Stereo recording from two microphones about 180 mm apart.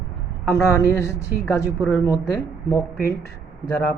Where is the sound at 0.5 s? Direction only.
15° left (ahead or behind).